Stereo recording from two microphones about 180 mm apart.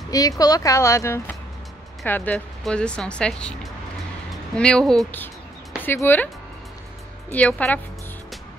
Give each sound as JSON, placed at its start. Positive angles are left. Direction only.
{"t": 0.1, "sound": "speech", "side_deg": 20}
{"t": 4.6, "sound": "speech", "side_deg": 5}
{"t": 7.2, "sound": "speech", "side_deg": 5}